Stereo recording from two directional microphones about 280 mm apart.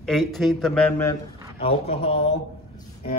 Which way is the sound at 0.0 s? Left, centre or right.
Centre.